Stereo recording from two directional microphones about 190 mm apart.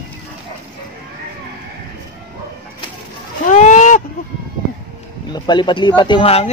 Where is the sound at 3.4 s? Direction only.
40° left (ahead or behind).